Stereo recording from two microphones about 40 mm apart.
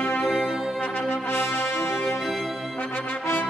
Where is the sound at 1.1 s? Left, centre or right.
Left.